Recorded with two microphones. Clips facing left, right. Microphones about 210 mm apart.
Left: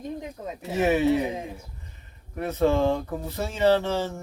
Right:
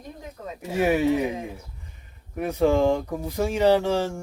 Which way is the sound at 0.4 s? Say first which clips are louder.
Left 1 dB; 15° left (ahead or behind).